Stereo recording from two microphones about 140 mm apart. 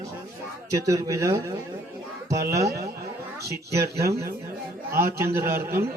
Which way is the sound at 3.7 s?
20° right (ahead or behind).